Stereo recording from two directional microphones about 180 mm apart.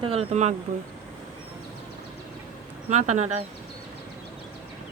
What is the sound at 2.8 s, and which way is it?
Speech, 40° right (ahead or behind).